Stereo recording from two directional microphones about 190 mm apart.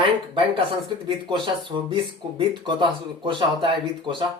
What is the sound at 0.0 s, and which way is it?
Speech, 25° right (ahead or behind).